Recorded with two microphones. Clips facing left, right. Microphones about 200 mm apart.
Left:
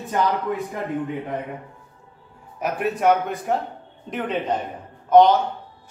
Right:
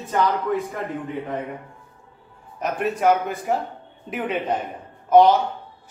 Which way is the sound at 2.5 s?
5° left (ahead or behind).